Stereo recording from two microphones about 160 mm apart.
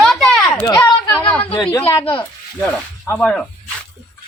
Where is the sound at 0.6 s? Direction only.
20° left (ahead or behind).